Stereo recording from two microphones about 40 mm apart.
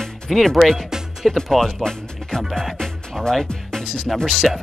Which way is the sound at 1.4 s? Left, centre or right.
Centre.